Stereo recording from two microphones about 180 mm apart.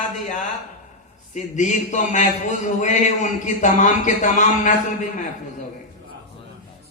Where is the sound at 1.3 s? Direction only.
45° left (ahead or behind).